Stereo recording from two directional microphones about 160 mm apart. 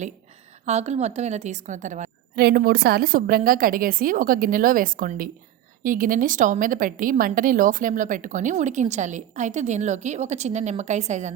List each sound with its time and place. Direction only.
0.6 s a woman's voice: 45° right (ahead or behind)
2.3 s a woman's voice: 75° right (ahead or behind); by 11.3 s 45° right (ahead or behind)